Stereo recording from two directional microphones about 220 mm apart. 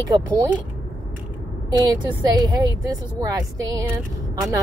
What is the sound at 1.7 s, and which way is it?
A woman's voice, 20° right (ahead or behind).